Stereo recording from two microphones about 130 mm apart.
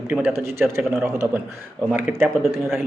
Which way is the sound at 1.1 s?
20° right (ahead or behind).